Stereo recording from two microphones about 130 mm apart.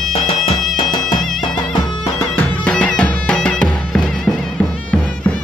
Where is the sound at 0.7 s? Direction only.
40° left (ahead or behind).